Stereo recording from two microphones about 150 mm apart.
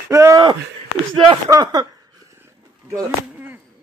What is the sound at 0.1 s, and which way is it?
Speech, 20° right (ahead or behind).